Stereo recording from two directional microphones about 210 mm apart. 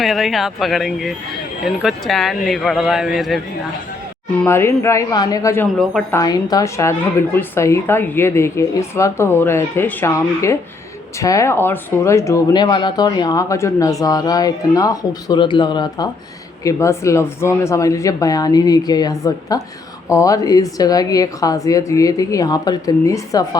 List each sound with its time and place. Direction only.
0.0 s speech: centre (ahead or behind)
4.4 s speech: 10° left (ahead or behind)
5.7 s speech: centre (ahead or behind)
6.1 s speech: 15° left (ahead or behind)